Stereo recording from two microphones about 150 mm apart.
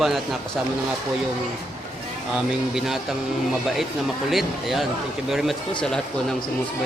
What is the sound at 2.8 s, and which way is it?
Speech, centre (ahead or behind).